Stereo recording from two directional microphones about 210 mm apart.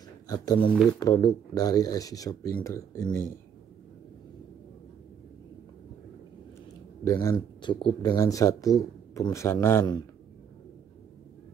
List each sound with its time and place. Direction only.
0.3 s speech: 20° left (ahead or behind)
7.1 s speech: 20° left (ahead or behind)